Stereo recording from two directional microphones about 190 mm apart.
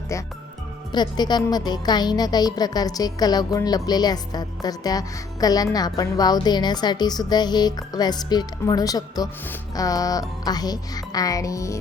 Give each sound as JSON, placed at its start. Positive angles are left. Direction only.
{"t": 0.9, "sound": "a woman's voice", "side_deg": 20}